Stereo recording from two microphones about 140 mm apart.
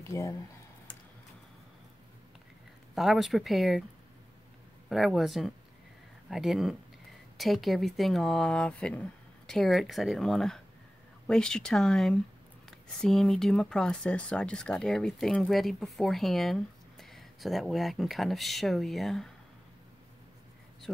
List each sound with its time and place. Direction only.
0.0 s speech: 20° left (ahead or behind)
2.9 s speech: centre (ahead or behind)
4.8 s speech: centre (ahead or behind)